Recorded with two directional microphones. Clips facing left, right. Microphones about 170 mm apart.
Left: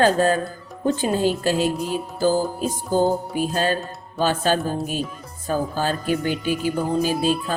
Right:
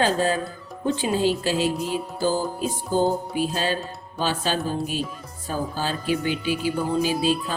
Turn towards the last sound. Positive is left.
turn(degrees=50)  # may be behind; listen again after turning